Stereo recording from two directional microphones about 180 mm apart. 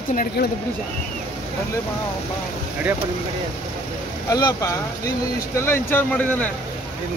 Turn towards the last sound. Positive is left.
turn(degrees=10)  # may be behind; listen again after turning